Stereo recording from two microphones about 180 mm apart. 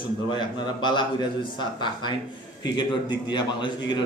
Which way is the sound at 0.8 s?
25° left (ahead or behind).